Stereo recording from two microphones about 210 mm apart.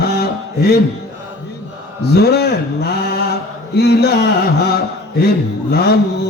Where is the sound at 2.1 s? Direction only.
50° left (ahead or behind).